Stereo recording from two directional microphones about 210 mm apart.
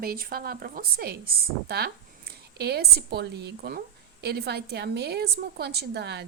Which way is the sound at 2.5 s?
50° right (ahead or behind).